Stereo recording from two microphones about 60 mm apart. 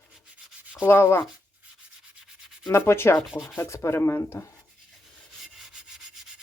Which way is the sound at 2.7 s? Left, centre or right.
Left.